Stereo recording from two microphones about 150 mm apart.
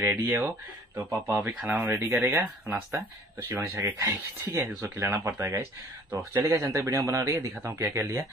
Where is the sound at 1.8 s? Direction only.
20° right (ahead or behind).